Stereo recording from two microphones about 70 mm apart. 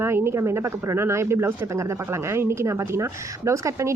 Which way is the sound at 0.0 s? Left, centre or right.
Right.